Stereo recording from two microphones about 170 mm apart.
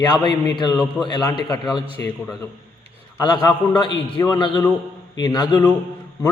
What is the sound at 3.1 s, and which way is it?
A man's voice, 25° left (ahead or behind).